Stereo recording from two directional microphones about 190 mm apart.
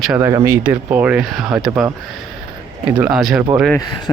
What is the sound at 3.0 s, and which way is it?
Speech, centre (ahead or behind).